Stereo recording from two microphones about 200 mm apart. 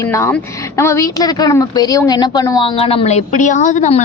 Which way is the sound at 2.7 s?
30° left (ahead or behind).